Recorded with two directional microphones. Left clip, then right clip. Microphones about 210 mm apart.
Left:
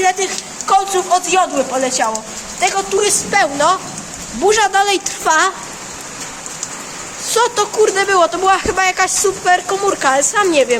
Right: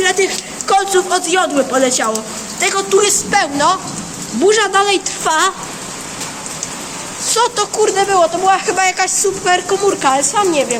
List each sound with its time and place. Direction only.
0.0 s a sound: 15° left (ahead or behind)
0.7 s a woman's voice: 10° left (ahead or behind)
5.2 s a woman's voice: 5° left (ahead or behind)
7.3 s a woman's voice: 10° left (ahead or behind)
8.1 s speech: 30° left (ahead or behind)
8.6 s a woman's voice: 10° left (ahead or behind)
10.5 s a woman's voice: 30° left (ahead or behind)